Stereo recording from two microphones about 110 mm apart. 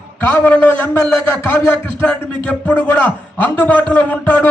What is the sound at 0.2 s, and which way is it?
A man's voice, 20° left (ahead or behind).